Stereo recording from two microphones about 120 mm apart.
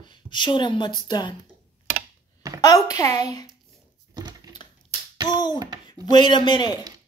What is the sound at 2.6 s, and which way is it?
Speech, 30° left (ahead or behind).